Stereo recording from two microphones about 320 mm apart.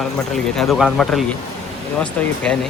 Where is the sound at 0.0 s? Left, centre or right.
Centre.